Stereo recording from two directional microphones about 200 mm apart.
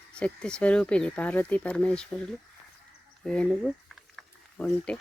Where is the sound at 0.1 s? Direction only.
5° left (ahead or behind).